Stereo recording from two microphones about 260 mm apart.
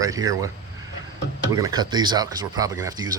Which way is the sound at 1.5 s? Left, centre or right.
Centre.